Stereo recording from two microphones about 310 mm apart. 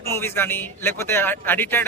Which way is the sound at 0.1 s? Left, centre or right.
Centre.